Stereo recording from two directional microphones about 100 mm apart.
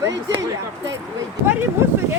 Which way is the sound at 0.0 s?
30° right (ahead or behind).